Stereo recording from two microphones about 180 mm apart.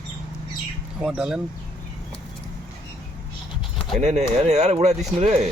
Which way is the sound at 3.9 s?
40° right (ahead or behind).